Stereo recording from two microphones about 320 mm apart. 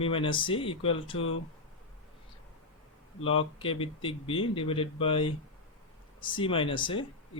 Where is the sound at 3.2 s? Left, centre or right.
Centre.